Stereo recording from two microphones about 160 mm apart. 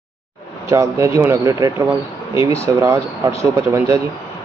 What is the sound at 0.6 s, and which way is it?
Speech, 20° right (ahead or behind).